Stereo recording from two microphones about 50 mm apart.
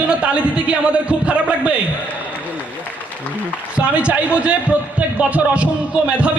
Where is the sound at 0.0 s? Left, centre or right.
Right.